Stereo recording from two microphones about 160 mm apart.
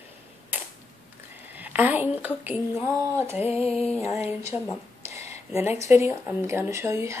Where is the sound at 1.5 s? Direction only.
10° right (ahead or behind).